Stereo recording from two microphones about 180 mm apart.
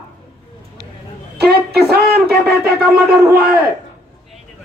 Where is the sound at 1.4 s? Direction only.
65° right (ahead or behind).